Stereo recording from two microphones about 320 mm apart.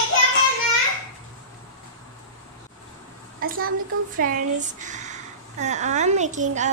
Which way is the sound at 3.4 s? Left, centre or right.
Right.